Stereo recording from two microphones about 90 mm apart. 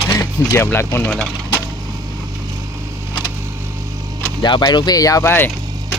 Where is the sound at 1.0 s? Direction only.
10° left (ahead or behind).